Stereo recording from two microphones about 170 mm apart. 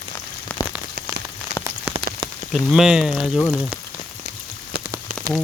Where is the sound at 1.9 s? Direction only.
30° right (ahead or behind).